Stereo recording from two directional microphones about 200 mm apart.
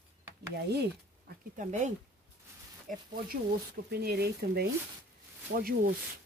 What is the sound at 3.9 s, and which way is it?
Speech, 50° right (ahead or behind).